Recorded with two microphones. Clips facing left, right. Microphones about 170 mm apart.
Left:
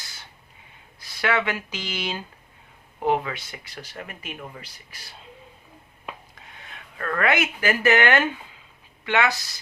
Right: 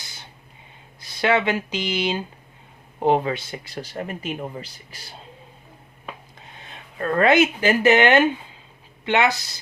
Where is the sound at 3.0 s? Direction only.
30° right (ahead or behind).